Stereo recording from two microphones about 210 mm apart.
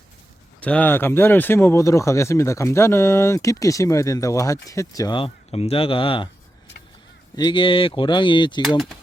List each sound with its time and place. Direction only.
0.6 s speech: 5° left (ahead or behind); by 6.2 s 25° left (ahead or behind)
7.3 s speech: 20° left (ahead or behind)